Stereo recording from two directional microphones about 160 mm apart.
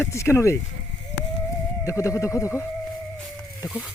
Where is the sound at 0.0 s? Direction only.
15° left (ahead or behind).